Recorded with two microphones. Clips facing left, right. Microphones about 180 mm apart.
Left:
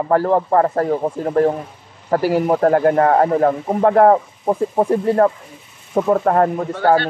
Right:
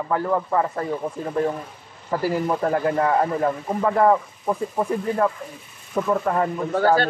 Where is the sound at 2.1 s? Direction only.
80° left; by 4.2 s 60° left (ahead or behind).